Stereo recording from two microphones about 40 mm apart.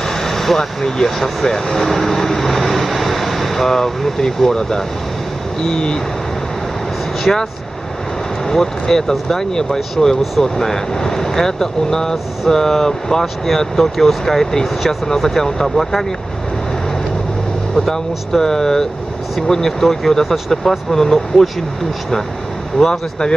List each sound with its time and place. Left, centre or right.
0.2 s speech: centre
7.3 s speech: centre
8.5 s speech: centre
17.7 s speech: centre
22.8 s speech: centre